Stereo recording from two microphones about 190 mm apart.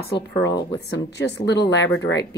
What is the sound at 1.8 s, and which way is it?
Speech, 85° left.